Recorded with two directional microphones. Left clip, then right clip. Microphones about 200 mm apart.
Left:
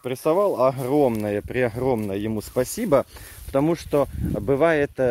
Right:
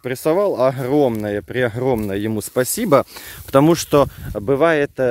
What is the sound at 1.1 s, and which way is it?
Speech, 20° right (ahead or behind).